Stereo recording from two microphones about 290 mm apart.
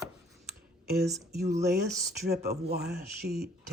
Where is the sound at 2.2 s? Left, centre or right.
Right.